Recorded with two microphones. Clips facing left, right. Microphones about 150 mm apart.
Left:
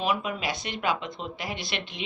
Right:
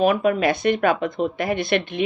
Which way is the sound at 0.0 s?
55° right (ahead or behind).